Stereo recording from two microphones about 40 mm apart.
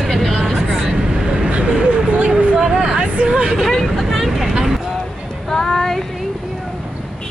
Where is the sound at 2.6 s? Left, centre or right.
Right.